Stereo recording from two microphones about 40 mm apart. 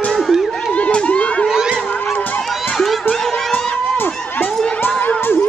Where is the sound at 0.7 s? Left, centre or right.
Left.